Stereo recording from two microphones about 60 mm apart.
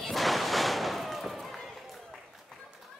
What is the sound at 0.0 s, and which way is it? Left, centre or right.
Slam, centre.